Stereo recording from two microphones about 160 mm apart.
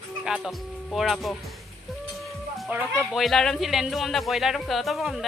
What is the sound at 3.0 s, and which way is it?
Speech, centre (ahead or behind).